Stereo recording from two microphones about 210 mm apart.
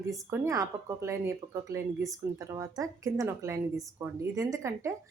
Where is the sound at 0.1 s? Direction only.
15° right (ahead or behind).